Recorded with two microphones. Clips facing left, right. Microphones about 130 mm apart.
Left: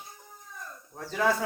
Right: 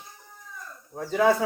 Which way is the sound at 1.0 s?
5° right (ahead or behind).